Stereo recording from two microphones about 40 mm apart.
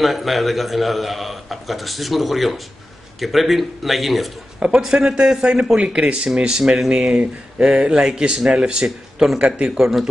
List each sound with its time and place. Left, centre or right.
0.0 s a man's voice: centre
4.7 s speech: centre
9.8 s speech: centre